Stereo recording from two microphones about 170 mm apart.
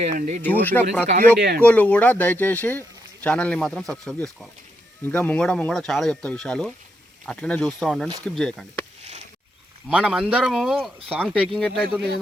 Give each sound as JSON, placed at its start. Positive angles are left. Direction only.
{"t": 0.0, "sound": "speech", "side_deg": -45}
{"t": 0.4, "sound": "speech", "side_deg": 10}
{"t": 1.4, "sound": "speech", "side_deg": -70}
{"t": 1.6, "sound": "speech", "side_deg": 10}
{"t": 9.9, "sound": "speech", "side_deg": -5}